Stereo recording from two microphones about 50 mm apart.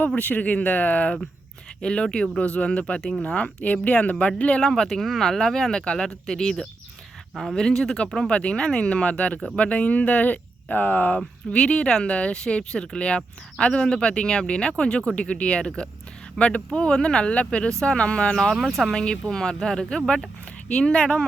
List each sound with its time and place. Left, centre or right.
0.2 s speech: left
1.8 s speech: centre
2.4 s speech: left
4.6 s speech: centre
5.7 s speech: centre
8.3 s speech: left
11.5 s speech: centre
17.9 s speech: left
18.6 s speech: centre
19.0 s speech: centre